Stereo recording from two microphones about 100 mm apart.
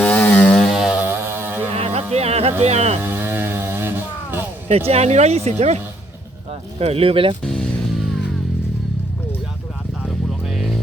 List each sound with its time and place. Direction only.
0.0 s chainsaw: 15° left (ahead or behind)
0.7 s music: 5° right (ahead or behind)
0.9 s a sound: 20° right (ahead or behind)
1.7 s a sound: 90° right
3.0 s music: 20° right (ahead or behind)
4.9 s speech: 90° right; by 7.3 s 65° right (ahead or behind)
7.4 s music: 5° left (ahead or behind)
10.4 s music: centre (ahead or behind)